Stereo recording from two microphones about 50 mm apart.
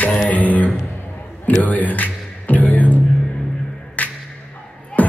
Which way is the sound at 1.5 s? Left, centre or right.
Left.